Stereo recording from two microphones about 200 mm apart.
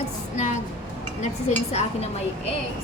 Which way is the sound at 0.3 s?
35° left (ahead or behind).